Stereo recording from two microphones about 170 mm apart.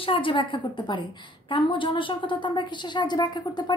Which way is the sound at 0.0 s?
30° left (ahead or behind).